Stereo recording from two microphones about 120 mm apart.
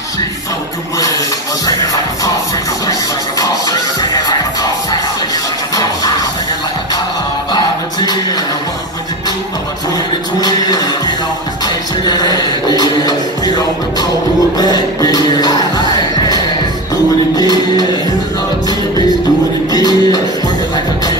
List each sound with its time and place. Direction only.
0.9 s speech: 30° left (ahead or behind)
3.3 s music: 30° left (ahead or behind)
7.5 s music: 35° left (ahead or behind)
10.4 s music: 35° left (ahead or behind)
19.7 s music: 35° left (ahead or behind)